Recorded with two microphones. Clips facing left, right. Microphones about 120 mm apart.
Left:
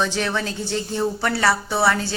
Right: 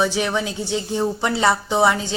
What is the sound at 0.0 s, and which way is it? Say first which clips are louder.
Speech: right 2 dB; 15° right (ahead or behind).